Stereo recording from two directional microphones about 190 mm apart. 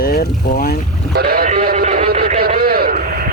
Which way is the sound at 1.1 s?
55° right (ahead or behind).